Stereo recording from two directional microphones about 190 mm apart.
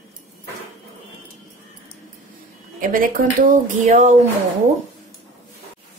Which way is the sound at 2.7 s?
45° right (ahead or behind).